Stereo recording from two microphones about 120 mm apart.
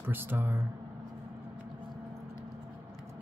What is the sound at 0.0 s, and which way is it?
Speech, 15° right (ahead or behind).